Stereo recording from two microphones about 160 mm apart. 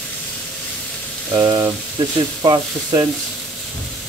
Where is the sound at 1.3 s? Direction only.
25° right (ahead or behind).